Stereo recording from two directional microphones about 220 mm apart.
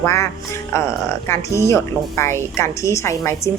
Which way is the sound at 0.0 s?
10° left (ahead or behind).